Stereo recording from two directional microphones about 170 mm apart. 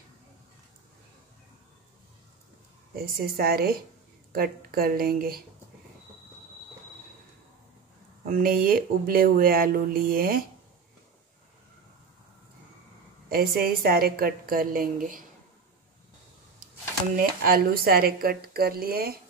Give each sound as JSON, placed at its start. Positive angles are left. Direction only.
{"t": 3.0, "sound": "speech", "side_deg": -65}
{"t": 8.3, "sound": "speech", "side_deg": -55}
{"t": 13.3, "sound": "speech", "side_deg": -60}
{"t": 17.2, "sound": "speech", "side_deg": -60}